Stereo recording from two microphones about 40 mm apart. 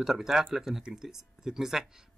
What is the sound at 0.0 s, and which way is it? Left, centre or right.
Speech, centre.